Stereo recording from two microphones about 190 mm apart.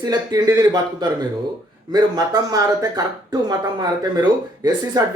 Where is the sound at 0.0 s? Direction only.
20° right (ahead or behind).